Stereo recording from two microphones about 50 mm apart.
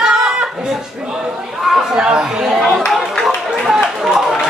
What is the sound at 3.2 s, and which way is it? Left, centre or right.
Chatter, centre.